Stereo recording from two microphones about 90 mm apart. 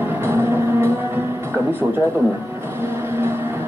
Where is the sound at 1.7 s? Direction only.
20° right (ahead or behind).